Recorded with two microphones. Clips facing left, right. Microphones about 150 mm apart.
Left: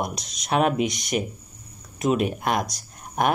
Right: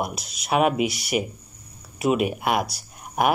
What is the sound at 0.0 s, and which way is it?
Speech, 5° right (ahead or behind).